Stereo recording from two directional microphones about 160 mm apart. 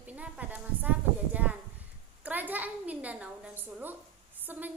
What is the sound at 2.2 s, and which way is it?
A woman's voice, 10° right (ahead or behind).